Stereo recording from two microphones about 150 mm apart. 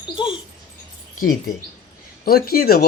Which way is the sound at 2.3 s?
85° left.